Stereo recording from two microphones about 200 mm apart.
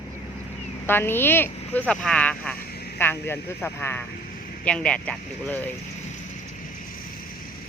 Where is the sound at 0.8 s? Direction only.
10° left (ahead or behind).